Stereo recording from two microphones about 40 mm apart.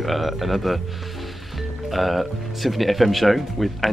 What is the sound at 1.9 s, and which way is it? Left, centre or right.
Speech, centre.